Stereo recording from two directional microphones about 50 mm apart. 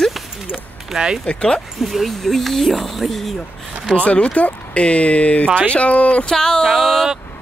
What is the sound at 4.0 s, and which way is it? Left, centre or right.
Speech, left.